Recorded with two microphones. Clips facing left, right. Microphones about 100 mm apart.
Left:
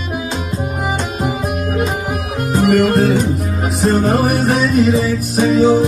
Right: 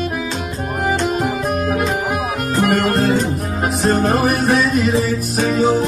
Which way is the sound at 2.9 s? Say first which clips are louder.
Left 3 dB; 5° left (ahead or behind).